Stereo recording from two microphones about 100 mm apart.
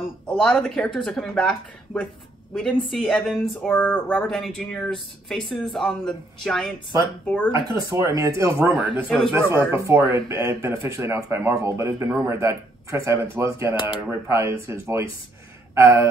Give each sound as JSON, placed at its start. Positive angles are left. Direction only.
{"t": 0.3, "sound": "speech", "side_deg": 5}
{"t": 3.7, "sound": "speech", "side_deg": 15}
{"t": 7.2, "sound": "speech", "side_deg": 20}
{"t": 8.0, "sound": "speech", "side_deg": -35}
{"t": 8.7, "sound": "speech", "side_deg": -15}
{"t": 9.3, "sound": "speech", "side_deg": -25}
{"t": 13.7, "sound": "speech", "side_deg": 60}
{"t": 14.2, "sound": "speech", "side_deg": -30}